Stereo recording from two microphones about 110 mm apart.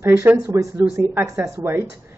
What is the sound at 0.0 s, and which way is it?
Speech, 20° right (ahead or behind).